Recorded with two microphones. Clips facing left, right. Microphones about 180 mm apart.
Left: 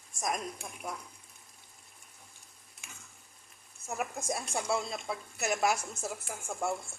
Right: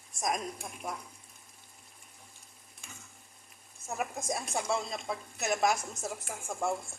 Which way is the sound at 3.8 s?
5° left (ahead or behind).